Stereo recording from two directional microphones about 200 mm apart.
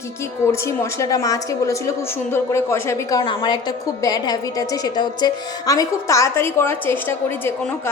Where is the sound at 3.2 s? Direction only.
25° left (ahead or behind).